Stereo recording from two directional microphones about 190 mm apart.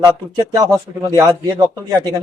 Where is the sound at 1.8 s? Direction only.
20° right (ahead or behind).